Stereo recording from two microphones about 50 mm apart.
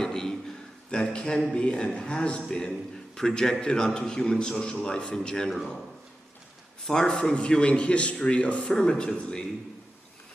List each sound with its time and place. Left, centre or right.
0.0 s a sound: centre
1.1 s a man's voice: centre
6.8 s a man's voice: centre